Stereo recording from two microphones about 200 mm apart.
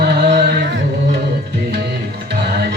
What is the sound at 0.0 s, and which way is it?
Music, 55° right (ahead or behind).